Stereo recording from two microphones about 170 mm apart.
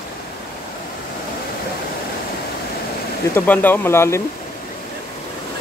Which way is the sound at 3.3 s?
10° left (ahead or behind).